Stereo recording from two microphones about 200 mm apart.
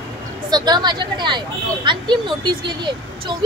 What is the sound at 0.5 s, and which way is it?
Speech, 20° right (ahead or behind).